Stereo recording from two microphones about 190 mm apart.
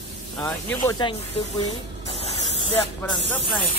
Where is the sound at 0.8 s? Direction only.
20° left (ahead or behind).